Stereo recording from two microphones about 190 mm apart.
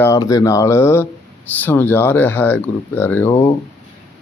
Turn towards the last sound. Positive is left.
turn(degrees=10)  # may be behind; listen again after turning